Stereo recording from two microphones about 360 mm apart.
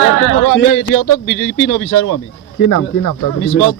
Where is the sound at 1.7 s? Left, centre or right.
Left.